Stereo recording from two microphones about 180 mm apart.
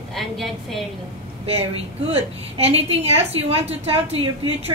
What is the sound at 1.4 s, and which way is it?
A woman's voice, 35° right (ahead or behind).